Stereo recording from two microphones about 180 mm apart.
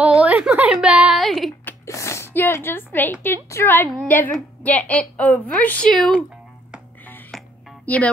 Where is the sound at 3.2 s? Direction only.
15° left (ahead or behind).